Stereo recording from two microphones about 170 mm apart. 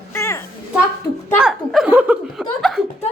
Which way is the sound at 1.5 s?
5° right (ahead or behind).